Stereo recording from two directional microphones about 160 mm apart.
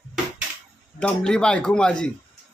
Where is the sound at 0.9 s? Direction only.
5° left (ahead or behind).